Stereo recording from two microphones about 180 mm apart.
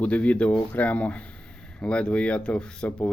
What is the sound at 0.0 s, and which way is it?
Speech, 5° left (ahead or behind).